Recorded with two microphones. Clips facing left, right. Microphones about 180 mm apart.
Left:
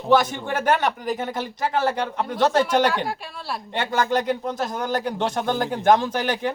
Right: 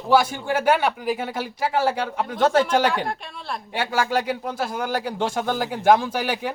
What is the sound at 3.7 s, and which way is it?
Speech, 10° right (ahead or behind).